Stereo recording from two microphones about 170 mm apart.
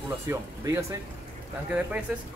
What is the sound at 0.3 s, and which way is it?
Speech, 15° right (ahead or behind).